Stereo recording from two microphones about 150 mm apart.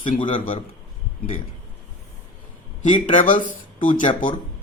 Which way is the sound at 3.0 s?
55° left (ahead or behind).